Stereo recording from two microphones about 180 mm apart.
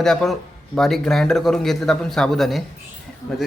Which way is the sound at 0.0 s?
Centre (ahead or behind).